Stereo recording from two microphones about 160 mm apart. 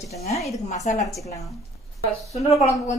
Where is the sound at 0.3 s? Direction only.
Centre (ahead or behind).